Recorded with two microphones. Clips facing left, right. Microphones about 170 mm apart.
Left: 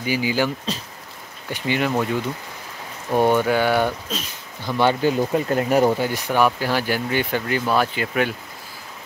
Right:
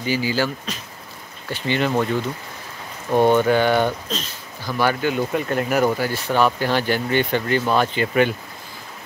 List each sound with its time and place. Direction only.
0.0 s speech: 15° left (ahead or behind)
1.5 s speech: 10° left (ahead or behind)
3.2 s speech: 10° left (ahead or behind)
4.6 s speech: 25° left (ahead or behind); by 8.4 s centre (ahead or behind)